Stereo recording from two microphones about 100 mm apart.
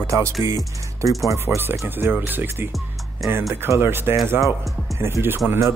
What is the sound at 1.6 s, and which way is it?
Speech, 20° right (ahead or behind).